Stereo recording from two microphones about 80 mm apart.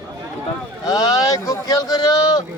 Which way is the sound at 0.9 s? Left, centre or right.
Left.